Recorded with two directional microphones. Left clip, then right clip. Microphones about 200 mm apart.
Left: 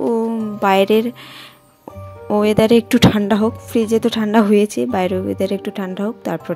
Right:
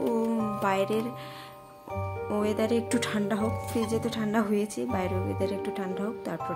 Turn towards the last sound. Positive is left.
turn(degrees=40)  # may be behind; listen again after turning